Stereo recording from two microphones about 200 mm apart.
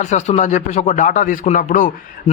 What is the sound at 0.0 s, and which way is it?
A man's voice, 35° left (ahead or behind).